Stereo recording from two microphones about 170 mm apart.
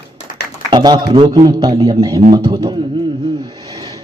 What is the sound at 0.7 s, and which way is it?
Speech, 25° right (ahead or behind).